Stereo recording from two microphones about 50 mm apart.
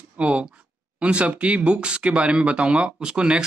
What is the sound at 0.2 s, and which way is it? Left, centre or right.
Speech, right.